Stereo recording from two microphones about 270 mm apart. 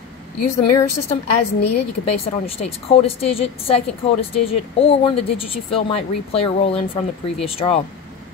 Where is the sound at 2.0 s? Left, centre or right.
Left.